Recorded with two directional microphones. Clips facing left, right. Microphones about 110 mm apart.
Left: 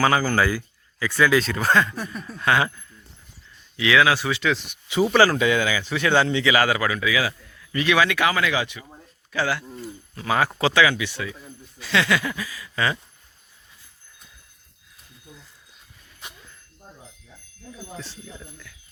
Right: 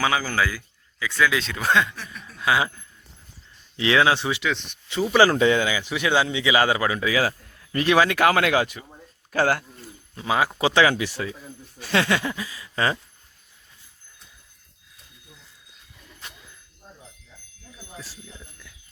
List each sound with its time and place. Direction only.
0.0 s speech: centre (ahead or behind)
2.0 s a sound: 40° left (ahead or behind)
2.4 s speech: 10° right (ahead or behind)
3.8 s speech: 30° right (ahead or behind)
4.4 s speech: 5° left (ahead or behind)
5.1 s speech: 25° right (ahead or behind)
6.5 s a man's voice: 25° right (ahead or behind); by 9.6 s 45° right (ahead or behind)
10.2 s speech: 15° right (ahead or behind)
10.8 s a man's voice: 40° right (ahead or behind)
17.9 s speech: 5° right (ahead or behind)